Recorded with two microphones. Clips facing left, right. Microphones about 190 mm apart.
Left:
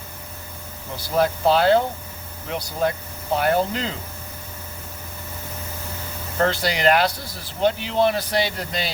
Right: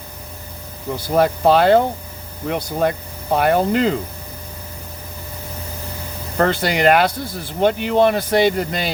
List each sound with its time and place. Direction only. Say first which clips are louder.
1.0 s speech: right 4 dB; 55° right (ahead or behind)
6.3 s speech: right 4 dB; 55° right (ahead or behind)